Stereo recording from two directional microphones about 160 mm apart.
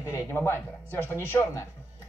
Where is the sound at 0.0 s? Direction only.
15° left (ahead or behind).